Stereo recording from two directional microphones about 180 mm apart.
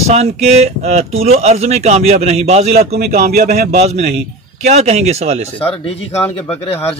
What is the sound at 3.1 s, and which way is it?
Speech, 50° right (ahead or behind).